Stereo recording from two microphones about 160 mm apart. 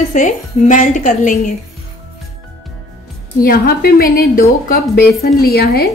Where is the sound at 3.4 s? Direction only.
65° left (ahead or behind).